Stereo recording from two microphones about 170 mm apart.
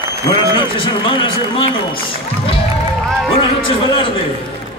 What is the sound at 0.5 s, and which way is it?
Speech, 30° left (ahead or behind).